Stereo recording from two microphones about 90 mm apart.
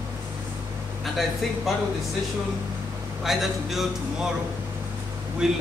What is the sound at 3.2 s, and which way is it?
Speech, centre (ahead or behind).